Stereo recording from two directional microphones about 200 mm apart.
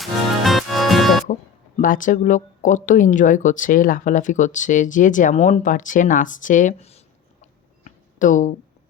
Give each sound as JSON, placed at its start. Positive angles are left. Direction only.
{"t": 0.0, "sound": "music", "side_deg": 0}
{"t": 1.3, "sound": "speech", "side_deg": 40}
{"t": 7.9, "sound": "a sound", "side_deg": 40}